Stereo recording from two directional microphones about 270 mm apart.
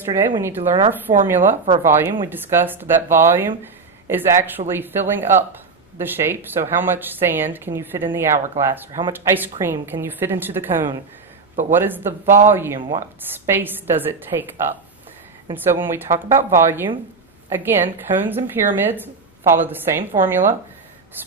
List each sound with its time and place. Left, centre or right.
0.6 s a woman's voice: centre
1.2 s speech: centre